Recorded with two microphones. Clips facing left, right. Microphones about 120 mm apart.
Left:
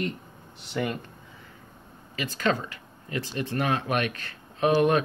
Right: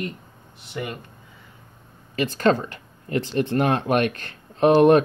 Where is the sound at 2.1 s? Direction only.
50° right (ahead or behind).